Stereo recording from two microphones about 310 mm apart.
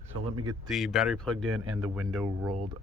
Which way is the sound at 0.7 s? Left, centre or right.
Centre.